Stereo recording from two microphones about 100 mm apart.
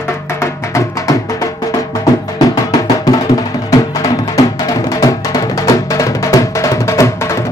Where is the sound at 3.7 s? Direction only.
35° left (ahead or behind).